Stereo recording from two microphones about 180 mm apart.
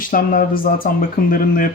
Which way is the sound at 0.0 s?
50° left (ahead or behind).